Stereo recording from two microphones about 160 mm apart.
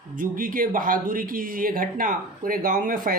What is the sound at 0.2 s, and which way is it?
Speech, 60° right (ahead or behind).